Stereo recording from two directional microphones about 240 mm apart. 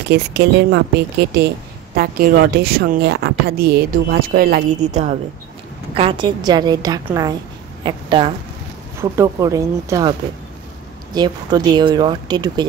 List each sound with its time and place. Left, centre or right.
0.1 s a woman's voice: right
5.9 s a woman's voice: right
11.1 s speech: centre